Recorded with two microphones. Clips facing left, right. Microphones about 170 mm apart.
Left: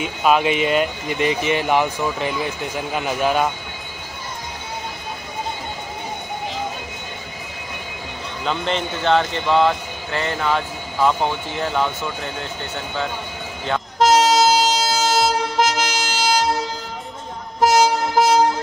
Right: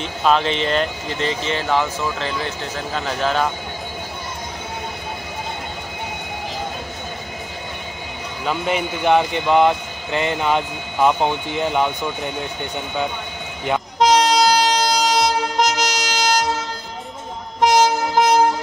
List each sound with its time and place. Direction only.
0.0 s speech: 10° left (ahead or behind)
8.5 s speech: 10° right (ahead or behind)
13.9 s train: centre (ahead or behind)
17.6 s train: 5° left (ahead or behind)